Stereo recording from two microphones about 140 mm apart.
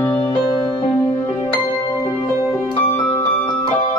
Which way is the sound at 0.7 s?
35° left (ahead or behind).